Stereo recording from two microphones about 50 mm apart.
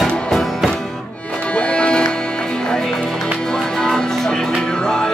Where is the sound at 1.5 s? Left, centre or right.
Left.